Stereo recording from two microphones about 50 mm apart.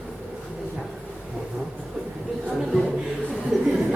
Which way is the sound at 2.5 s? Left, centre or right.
Centre.